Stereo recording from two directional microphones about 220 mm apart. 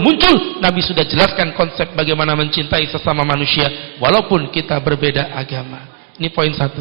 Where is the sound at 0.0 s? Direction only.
20° right (ahead or behind).